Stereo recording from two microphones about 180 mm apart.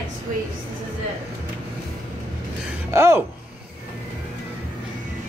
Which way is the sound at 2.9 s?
15° right (ahead or behind).